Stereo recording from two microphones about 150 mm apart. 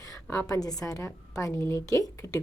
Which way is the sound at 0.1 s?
20° left (ahead or behind).